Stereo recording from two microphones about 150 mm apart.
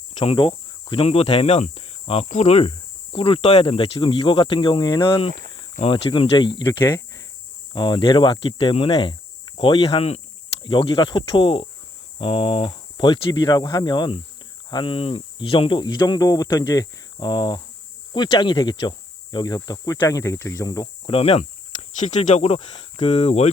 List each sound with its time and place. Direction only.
0.3 s speech: 35° left (ahead or behind)
20.8 s speech: 40° left (ahead or behind)